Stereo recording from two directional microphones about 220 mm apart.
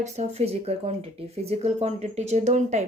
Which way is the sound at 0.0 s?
30° right (ahead or behind).